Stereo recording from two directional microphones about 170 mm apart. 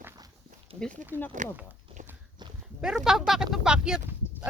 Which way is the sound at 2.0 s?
45° right (ahead or behind).